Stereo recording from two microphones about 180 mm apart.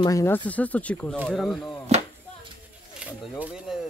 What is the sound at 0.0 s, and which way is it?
Speech, 15° left (ahead or behind).